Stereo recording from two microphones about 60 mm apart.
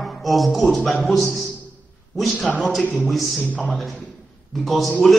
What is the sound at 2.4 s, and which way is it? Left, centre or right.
Speech, left.